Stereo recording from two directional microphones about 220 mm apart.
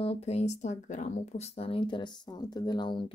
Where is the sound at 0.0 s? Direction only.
25° left (ahead or behind).